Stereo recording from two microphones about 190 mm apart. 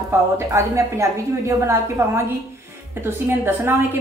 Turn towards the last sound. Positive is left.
turn(degrees=-10)  # may be behind; listen again after turning